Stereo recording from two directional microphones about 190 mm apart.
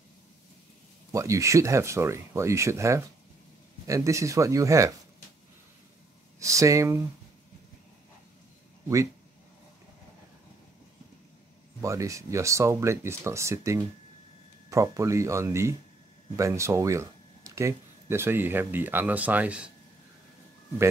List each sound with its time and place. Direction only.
1.1 s speech: 15° right (ahead or behind)
6.4 s speech: 15° right (ahead or behind)
11.8 s speech: 15° right (ahead or behind)